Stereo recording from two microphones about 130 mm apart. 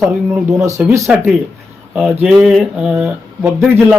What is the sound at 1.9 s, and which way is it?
A man's voice, 5° right (ahead or behind).